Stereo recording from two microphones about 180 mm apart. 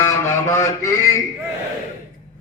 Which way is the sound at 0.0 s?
15° left (ahead or behind).